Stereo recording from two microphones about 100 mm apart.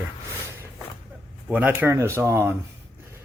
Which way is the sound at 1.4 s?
15° right (ahead or behind).